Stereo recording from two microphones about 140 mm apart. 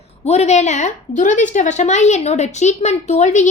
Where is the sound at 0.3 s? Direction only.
50° left (ahead or behind).